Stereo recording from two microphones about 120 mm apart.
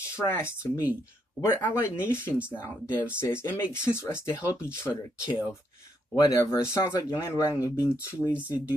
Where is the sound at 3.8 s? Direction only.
20° left (ahead or behind).